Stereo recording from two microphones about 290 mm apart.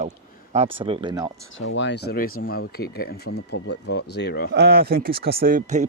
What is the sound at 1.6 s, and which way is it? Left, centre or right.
Speech, left.